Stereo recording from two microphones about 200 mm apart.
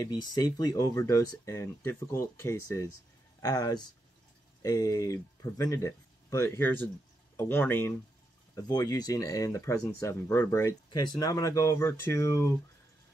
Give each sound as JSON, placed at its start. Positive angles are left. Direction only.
{"t": 0.0, "sound": "speech", "side_deg": 20}